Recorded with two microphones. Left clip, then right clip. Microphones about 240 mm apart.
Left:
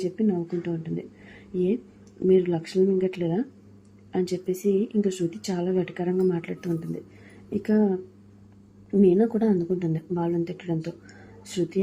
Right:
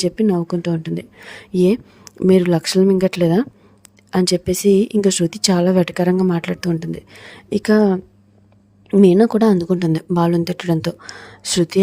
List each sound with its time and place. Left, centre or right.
0.0 s speech: right